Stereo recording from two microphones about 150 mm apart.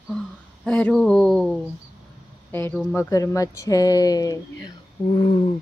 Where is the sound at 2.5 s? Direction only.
15° left (ahead or behind).